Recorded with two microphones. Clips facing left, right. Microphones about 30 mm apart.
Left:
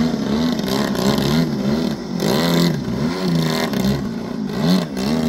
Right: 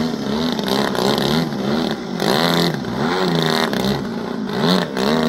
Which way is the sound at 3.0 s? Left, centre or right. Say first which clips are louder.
Right 3 dB; right.